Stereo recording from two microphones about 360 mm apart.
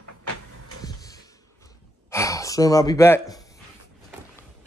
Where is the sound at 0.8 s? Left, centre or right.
Centre.